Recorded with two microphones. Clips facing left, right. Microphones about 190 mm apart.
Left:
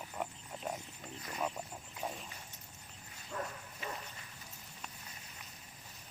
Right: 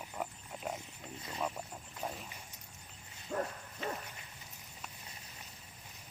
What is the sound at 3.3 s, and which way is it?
Bow-wow, 35° right (ahead or behind).